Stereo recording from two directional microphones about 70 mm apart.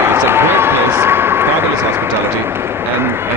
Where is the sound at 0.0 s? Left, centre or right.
Right.